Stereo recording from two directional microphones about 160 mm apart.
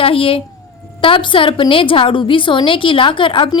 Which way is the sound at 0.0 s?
35° left (ahead or behind).